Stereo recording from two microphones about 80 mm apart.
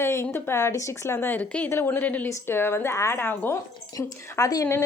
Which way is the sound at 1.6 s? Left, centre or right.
Left.